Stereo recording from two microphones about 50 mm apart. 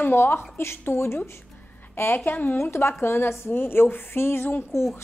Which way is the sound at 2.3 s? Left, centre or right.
Left.